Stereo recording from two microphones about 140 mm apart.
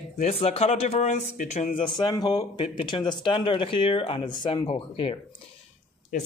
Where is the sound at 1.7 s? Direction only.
35° left (ahead or behind).